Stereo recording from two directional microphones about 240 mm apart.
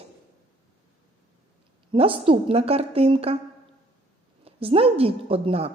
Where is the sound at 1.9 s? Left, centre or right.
Right.